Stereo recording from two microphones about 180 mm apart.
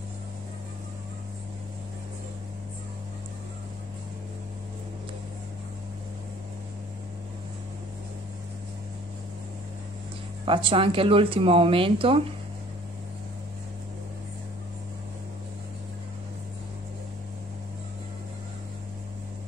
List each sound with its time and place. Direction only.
10.4 s speech: 30° right (ahead or behind)